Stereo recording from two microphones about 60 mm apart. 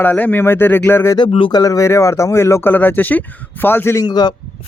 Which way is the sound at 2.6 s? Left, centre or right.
Left.